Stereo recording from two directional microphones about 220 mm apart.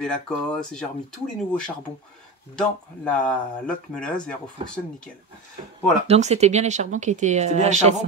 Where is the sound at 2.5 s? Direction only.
5° left (ahead or behind).